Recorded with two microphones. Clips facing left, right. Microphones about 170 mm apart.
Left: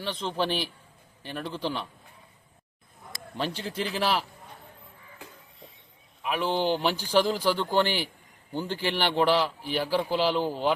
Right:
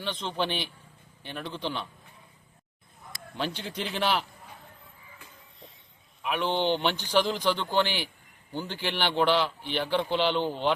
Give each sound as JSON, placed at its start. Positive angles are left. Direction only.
{"t": 0.0, "sound": "a man's voice", "side_deg": 5}
{"t": 3.3, "sound": "a man's voice", "side_deg": 5}
{"t": 6.2, "sound": "speech", "side_deg": 5}
{"t": 7.9, "sound": "a man's voice", "side_deg": 40}
{"t": 8.5, "sound": "a man's voice", "side_deg": 10}